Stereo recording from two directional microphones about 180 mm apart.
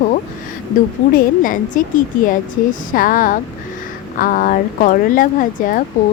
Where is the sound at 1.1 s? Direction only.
50° left (ahead or behind).